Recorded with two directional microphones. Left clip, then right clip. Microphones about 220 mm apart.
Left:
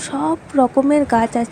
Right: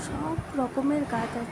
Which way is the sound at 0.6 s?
40° left (ahead or behind).